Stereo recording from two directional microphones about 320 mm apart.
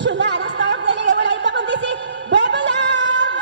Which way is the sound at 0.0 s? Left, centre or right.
Right.